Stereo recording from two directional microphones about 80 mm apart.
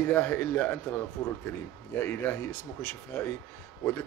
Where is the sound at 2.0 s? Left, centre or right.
Left.